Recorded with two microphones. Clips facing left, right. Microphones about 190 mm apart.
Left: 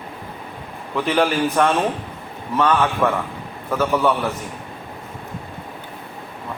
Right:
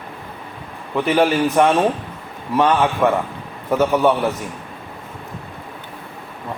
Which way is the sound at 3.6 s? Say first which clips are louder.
Right 3 dB; 20° right (ahead or behind).